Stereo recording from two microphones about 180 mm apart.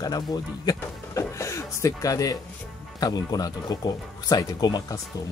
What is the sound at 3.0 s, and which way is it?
Speech, 20° left (ahead or behind).